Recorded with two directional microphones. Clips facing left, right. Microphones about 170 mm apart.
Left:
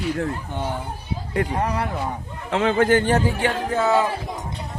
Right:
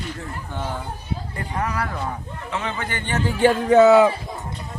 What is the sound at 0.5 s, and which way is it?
Speech, 15° left (ahead or behind).